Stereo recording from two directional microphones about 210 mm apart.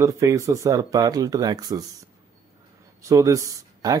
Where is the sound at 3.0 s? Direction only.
15° right (ahead or behind).